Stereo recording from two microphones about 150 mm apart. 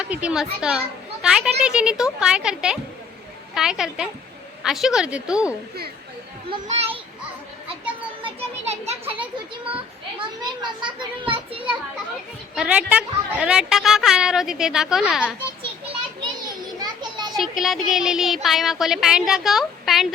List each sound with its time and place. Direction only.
0.0 s a child's voice: 10° right (ahead or behind)
6.7 s a child's voice: 45° right (ahead or behind)
8.2 s children playing: 40° right (ahead or behind)
10.2 s a child's voice: 30° right (ahead or behind)
11.3 s children playing: 35° right (ahead or behind)
12.5 s a woman's voice: 5° right (ahead or behind)
16.5 s children playing: 30° right (ahead or behind)
17.6 s a woman's voice: centre (ahead or behind)